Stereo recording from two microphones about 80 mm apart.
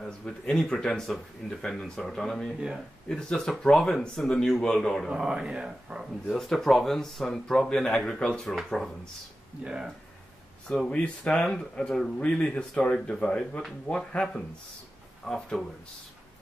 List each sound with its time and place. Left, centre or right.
0.0 s speech: centre
5.1 s speech: centre
6.2 s speech: centre
9.7 s speech: centre
10.7 s speech: centre